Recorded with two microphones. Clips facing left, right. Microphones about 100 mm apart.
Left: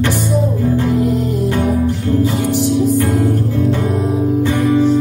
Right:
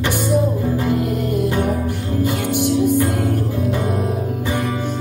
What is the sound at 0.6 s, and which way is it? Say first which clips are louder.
Music: left 4 dB; centre (ahead or behind).